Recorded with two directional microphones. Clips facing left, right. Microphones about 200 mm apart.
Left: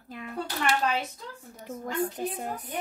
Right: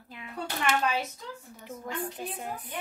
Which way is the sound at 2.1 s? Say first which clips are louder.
Left 4 dB; 40° left (ahead or behind).